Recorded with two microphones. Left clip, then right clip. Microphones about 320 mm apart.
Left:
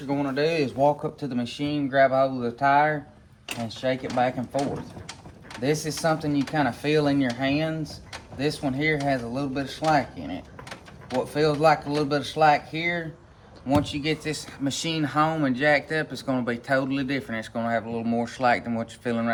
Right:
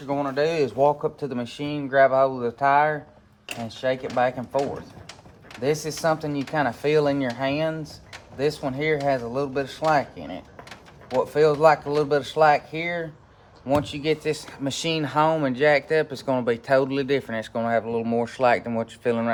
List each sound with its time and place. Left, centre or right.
0.1 s speech: centre